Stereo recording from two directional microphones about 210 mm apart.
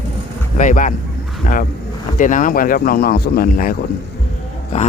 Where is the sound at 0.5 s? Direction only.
35° left (ahead or behind).